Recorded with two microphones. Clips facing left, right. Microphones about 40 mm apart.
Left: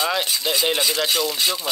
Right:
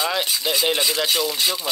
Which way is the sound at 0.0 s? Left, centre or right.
Centre.